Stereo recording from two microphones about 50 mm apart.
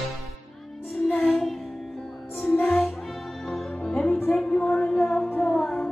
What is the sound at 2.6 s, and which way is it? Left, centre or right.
Music, left.